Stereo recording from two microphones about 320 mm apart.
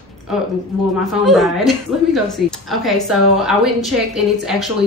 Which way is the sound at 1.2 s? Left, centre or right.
Centre.